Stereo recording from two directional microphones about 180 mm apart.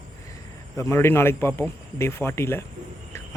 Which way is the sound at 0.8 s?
15° left (ahead or behind).